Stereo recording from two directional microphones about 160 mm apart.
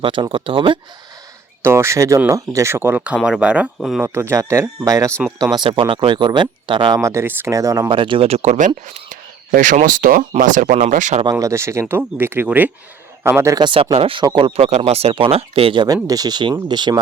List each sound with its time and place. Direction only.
0.0 s speech: 30° right (ahead or behind)
1.6 s speech: 15° right (ahead or behind)
4.0 s speech: 15° right (ahead or behind)
5.5 s speech: 30° right (ahead or behind)
7.0 s speech: 15° right (ahead or behind); by 11.2 s 50° right (ahead or behind)
11.2 s speech: 20° right (ahead or behind)
13.9 s speech: 35° right (ahead or behind)